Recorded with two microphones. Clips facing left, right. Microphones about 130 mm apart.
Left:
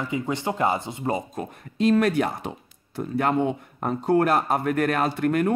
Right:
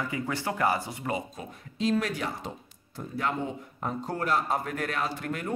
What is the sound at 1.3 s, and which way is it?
Speech, 60° left (ahead or behind).